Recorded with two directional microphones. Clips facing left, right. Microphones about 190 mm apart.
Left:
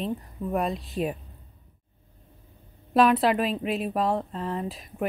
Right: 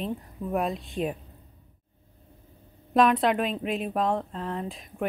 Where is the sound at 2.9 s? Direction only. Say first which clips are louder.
Left 1 dB; 5° left (ahead or behind).